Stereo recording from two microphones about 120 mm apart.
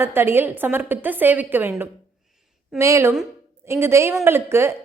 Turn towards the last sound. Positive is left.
turn(degrees=-20)  # may be behind; listen again after turning